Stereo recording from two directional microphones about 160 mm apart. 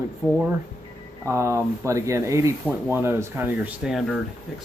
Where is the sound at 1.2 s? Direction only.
15° right (ahead or behind); by 4.2 s centre (ahead or behind).